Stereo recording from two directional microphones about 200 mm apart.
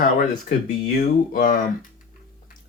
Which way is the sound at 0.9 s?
45° left (ahead or behind).